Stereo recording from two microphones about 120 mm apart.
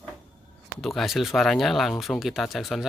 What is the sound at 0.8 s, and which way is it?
Speech, centre (ahead or behind).